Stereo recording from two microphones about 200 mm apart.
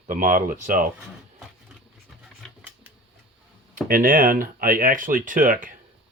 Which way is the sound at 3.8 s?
45° right (ahead or behind).